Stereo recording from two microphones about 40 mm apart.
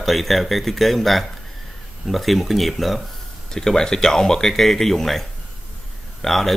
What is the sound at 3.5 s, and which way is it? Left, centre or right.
Speech, centre.